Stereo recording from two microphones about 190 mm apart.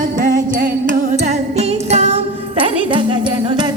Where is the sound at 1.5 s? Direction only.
35° right (ahead or behind).